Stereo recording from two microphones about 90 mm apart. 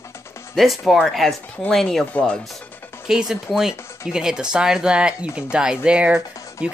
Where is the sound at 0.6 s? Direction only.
Centre (ahead or behind).